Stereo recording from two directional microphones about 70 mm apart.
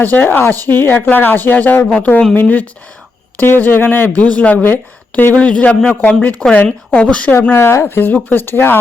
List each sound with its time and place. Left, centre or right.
0.0 s a woman's voice: left
4.2 s a woman's voice: left
7.5 s speech: left